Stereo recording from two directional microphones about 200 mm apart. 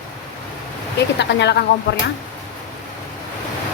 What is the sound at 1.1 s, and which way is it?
Speech, 60° left (ahead or behind).